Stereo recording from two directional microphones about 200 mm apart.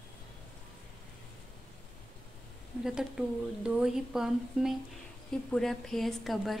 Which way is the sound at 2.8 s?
Centre (ahead or behind).